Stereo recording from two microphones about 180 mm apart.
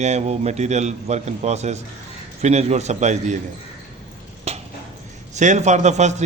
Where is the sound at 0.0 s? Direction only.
40° right (ahead or behind).